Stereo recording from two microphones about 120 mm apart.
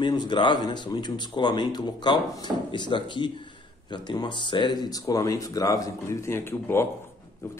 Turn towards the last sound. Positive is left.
turn(degrees=20)  # may be behind; listen again after turning